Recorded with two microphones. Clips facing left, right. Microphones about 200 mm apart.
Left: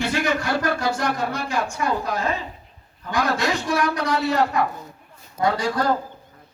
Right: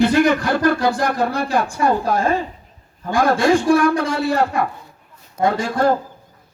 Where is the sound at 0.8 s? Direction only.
55° right (ahead or behind).